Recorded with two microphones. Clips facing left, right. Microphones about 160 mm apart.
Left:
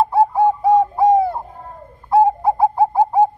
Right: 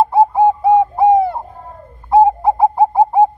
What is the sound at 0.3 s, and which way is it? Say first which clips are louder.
Bird: right 3 dB; 20° right (ahead or behind).